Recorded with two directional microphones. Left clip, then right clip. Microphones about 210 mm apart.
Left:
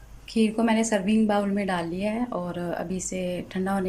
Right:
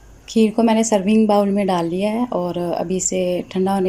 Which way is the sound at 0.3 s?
20° right (ahead or behind).